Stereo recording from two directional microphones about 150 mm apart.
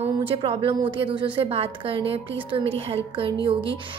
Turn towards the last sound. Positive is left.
turn(degrees=-35)  # may be behind; listen again after turning